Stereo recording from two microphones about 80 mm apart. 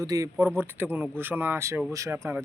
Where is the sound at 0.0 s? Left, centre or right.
Right.